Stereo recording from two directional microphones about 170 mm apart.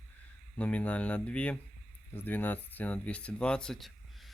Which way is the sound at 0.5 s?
5° left (ahead or behind).